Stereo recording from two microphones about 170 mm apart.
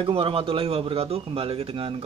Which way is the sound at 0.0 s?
35° right (ahead or behind).